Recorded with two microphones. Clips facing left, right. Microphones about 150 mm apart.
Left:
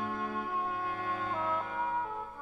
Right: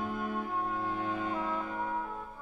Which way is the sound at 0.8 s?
20° right (ahead or behind).